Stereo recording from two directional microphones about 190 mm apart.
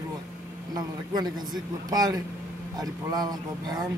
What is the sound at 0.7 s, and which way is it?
Speech, 20° right (ahead or behind).